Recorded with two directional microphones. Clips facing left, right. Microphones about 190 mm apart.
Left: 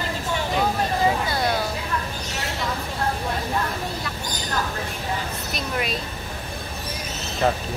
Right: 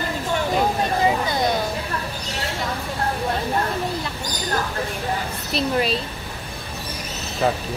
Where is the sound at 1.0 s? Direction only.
20° right (ahead or behind).